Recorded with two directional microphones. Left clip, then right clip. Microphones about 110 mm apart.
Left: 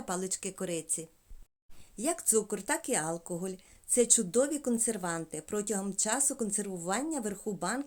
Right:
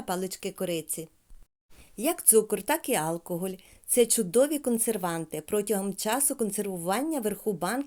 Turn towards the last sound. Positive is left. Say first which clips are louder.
# right 5 dB
turn(degrees=-50)  # may be behind; listen again after turning